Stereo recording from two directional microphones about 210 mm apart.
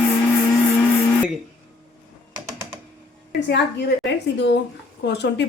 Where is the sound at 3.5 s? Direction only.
55° left (ahead or behind).